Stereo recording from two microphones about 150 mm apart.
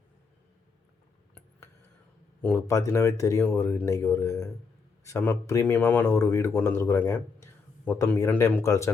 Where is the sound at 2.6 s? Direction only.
20° left (ahead or behind).